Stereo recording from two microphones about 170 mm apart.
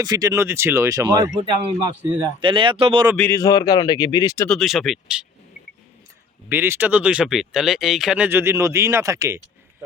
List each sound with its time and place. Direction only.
0.0 s speech: 20° right (ahead or behind)
3.2 s speech: 15° left (ahead or behind)
4.4 s speech: centre (ahead or behind)
6.5 s speech: 10° right (ahead or behind)